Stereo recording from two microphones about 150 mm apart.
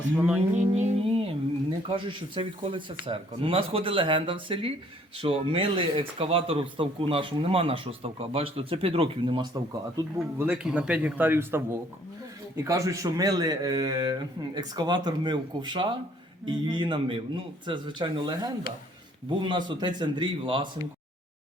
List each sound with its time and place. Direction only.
0.2 s a man's voice: 10° right (ahead or behind)
0.5 s music: 55° right (ahead or behind)
1.9 s speech: 35° right (ahead or behind)
10.3 s a man's voice: 10° right (ahead or behind); by 20.7 s 35° right (ahead or behind)